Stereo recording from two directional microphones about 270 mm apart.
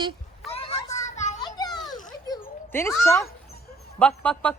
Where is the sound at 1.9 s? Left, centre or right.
Centre.